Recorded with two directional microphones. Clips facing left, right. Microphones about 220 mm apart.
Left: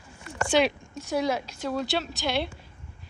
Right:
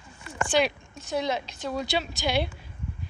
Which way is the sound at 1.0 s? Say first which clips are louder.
Left 2 dB; 10° left (ahead or behind).